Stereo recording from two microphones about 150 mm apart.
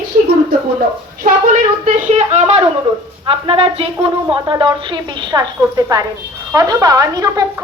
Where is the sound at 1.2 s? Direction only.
55° right (ahead or behind).